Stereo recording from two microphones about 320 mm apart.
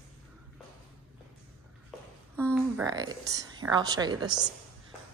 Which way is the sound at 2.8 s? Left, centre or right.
Centre.